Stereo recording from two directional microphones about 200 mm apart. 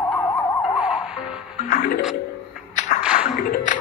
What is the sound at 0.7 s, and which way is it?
Music, 5° right (ahead or behind).